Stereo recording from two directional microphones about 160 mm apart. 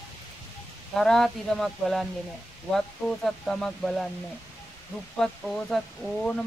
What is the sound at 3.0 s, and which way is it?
Speech, 15° left (ahead or behind).